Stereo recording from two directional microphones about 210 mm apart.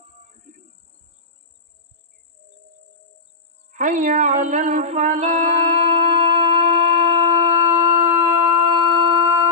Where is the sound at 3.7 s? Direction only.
35° right (ahead or behind).